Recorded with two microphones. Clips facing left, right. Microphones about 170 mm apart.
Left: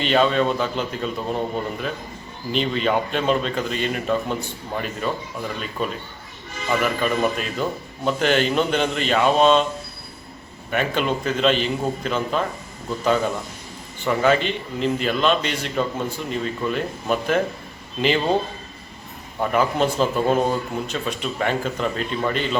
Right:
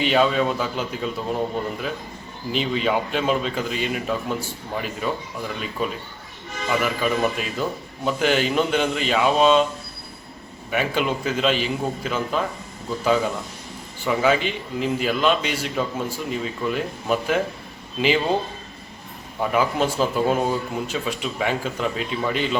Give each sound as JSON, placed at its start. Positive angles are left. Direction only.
{"t": 0.0, "sound": "a man's voice", "side_deg": -5}
{"t": 2.6, "sound": "a man's voice", "side_deg": -5}
{"t": 6.7, "sound": "a man's voice", "side_deg": -5}
{"t": 10.7, "sound": "a man's voice", "side_deg": -5}
{"t": 19.4, "sound": "a man's voice", "side_deg": -5}